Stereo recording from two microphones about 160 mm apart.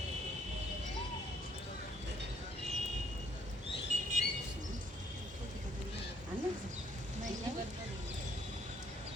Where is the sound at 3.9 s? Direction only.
50° right (ahead or behind).